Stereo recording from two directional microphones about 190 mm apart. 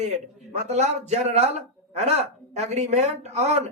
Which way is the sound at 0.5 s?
35° right (ahead or behind).